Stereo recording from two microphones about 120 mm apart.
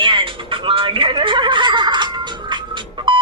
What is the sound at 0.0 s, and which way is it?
Music, 45° right (ahead or behind).